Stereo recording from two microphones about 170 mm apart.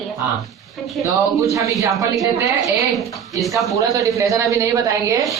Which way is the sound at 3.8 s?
20° right (ahead or behind).